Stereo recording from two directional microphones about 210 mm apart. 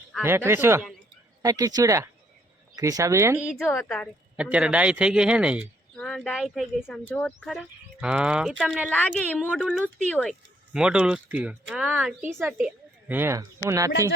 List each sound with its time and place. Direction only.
0.2 s a man's voice: 10° right (ahead or behind)